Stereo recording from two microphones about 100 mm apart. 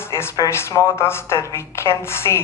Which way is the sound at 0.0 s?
25° left (ahead or behind).